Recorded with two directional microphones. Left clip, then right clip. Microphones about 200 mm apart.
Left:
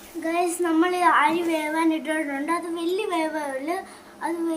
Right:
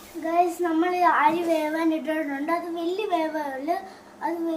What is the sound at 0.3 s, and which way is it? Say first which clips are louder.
A child's voice: right 1 dB; 10° right (ahead or behind).